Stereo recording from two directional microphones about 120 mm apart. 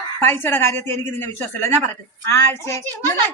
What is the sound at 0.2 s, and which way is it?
Speech, 20° left (ahead or behind).